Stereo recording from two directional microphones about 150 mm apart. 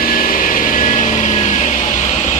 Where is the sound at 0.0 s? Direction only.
70° left (ahead or behind); by 1.9 s 55° left (ahead or behind).